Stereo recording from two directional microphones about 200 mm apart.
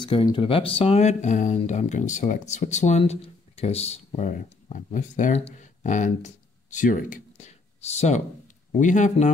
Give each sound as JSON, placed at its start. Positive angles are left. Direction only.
{"t": 0.0, "sound": "speech", "side_deg": 25}